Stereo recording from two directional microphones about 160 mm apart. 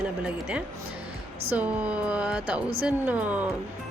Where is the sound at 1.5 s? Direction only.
10° right (ahead or behind).